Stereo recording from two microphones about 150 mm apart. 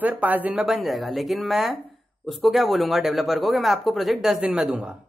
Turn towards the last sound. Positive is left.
turn(degrees=-5)  # may be behind; listen again after turning